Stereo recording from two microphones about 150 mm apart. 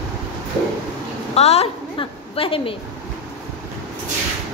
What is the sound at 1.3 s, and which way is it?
A woman's voice, 45° left (ahead or behind).